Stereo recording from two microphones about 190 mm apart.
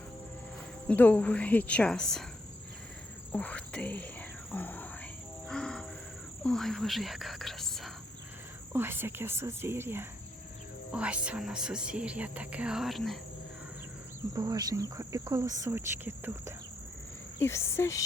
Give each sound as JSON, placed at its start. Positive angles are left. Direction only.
{"t": 0.9, "sound": "a woman's voice", "side_deg": 10}
{"t": 3.3, "sound": "a woman's voice", "side_deg": 5}
{"t": 5.5, "sound": "insect", "side_deg": 5}
{"t": 6.4, "sound": "speech", "side_deg": 0}
{"t": 8.7, "sound": "speech", "side_deg": -10}
{"t": 14.3, "sound": "speech", "side_deg": -20}
{"t": 17.4, "sound": "a woman's voice", "side_deg": 15}